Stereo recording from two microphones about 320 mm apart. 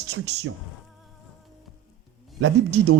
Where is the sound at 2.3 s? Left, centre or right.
Right.